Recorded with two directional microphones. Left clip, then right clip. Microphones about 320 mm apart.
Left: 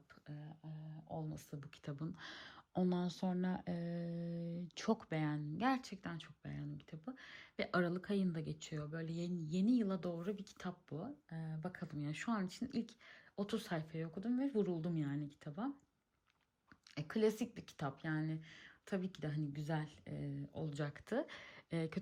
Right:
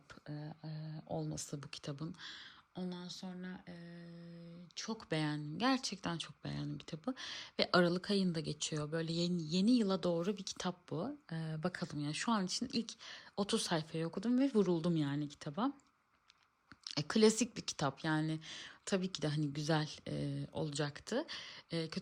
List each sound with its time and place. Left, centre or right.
0.3 s speech: right; by 2.4 s centre
2.8 s speech: centre
4.0 s humming: left
4.7 s speech: centre
4.9 s speech: centre
16.8 s speech: centre